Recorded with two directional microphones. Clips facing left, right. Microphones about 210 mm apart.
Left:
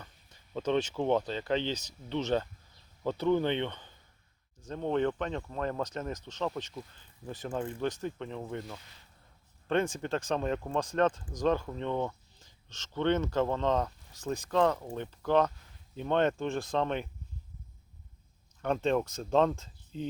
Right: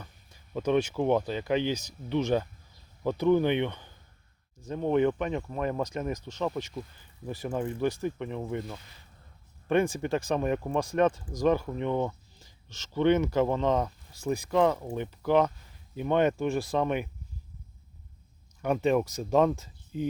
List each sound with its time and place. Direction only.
0.0 s speech: 10° right (ahead or behind)
18.6 s speech: 10° right (ahead or behind)